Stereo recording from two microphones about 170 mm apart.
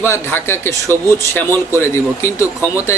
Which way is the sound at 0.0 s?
15° left (ahead or behind).